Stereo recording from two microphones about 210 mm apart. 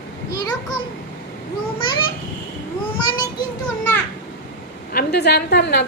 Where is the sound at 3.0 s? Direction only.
20° left (ahead or behind).